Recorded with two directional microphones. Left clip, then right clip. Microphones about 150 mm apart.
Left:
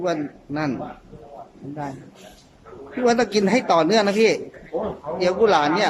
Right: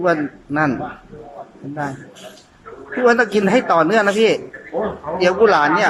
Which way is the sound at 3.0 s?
20° left (ahead or behind).